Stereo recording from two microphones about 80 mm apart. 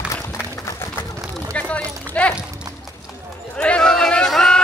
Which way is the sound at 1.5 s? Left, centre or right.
Centre.